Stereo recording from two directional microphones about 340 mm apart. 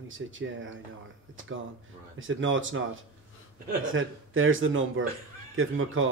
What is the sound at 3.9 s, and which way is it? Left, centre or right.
Speech, right.